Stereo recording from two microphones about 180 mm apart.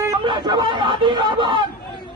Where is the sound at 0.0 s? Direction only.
20° right (ahead or behind).